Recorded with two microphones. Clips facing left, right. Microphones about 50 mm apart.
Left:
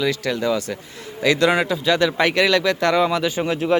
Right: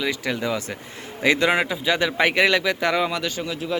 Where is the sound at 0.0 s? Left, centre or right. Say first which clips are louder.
Left 4 dB; centre.